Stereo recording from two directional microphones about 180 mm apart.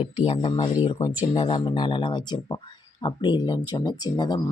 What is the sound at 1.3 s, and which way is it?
Speech, 30° left (ahead or behind).